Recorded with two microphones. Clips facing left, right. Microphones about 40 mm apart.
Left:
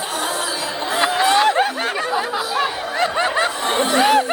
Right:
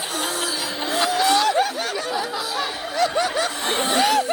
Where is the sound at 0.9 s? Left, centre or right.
Left.